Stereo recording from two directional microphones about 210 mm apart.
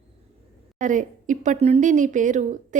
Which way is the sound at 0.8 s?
35° right (ahead or behind).